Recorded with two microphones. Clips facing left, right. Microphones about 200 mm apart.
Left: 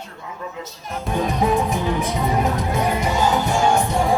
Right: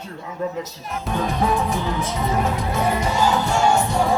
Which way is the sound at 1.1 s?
15° left (ahead or behind).